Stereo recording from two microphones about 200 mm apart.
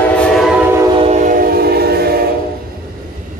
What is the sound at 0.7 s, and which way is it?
Train, 30° right (ahead or behind).